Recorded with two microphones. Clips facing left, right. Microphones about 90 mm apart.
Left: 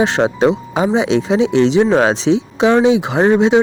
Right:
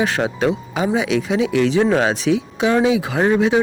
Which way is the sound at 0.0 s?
25° left (ahead or behind).